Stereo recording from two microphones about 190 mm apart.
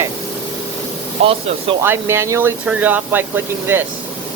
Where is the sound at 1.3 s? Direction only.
30° right (ahead or behind).